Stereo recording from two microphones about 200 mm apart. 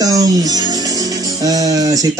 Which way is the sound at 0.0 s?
20° right (ahead or behind).